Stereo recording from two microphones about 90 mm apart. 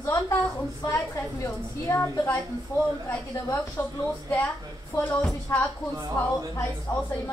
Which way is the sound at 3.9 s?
35° left (ahead or behind).